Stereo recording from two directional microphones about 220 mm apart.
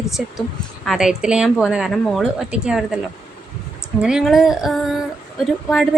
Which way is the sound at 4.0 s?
Centre (ahead or behind).